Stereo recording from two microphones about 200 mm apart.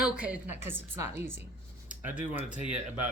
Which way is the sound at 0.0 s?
5° right (ahead or behind).